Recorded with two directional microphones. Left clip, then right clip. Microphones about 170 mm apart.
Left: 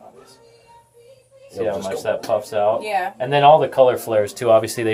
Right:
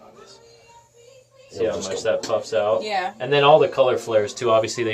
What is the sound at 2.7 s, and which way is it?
Speech, 5° left (ahead or behind).